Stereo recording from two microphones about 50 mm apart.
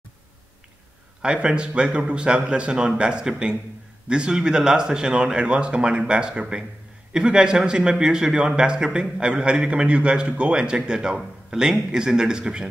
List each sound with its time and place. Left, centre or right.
1.2 s a man's voice: centre